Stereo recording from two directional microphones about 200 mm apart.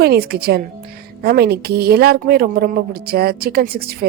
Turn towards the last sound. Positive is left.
turn(degrees=-50)  # may be behind; listen again after turning